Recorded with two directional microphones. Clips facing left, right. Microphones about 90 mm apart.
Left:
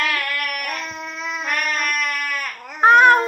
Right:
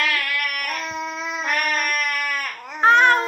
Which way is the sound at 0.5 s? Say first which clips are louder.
Left 1 dB; 25° left (ahead or behind).